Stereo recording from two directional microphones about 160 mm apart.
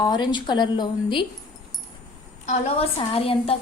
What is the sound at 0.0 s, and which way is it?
A woman's voice, 30° left (ahead or behind).